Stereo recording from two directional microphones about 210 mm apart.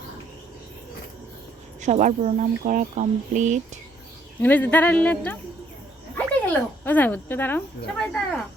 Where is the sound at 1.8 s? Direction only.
35° right (ahead or behind).